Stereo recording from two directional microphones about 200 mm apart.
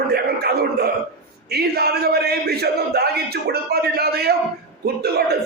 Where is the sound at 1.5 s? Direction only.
55° right (ahead or behind).